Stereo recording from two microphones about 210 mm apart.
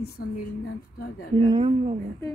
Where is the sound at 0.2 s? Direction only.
90° left.